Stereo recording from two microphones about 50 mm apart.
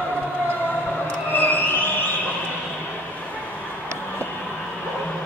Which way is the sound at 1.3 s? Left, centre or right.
Left.